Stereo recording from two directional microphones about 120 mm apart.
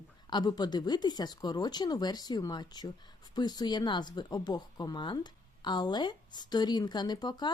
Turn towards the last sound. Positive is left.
turn(degrees=35)  # may be behind; listen again after turning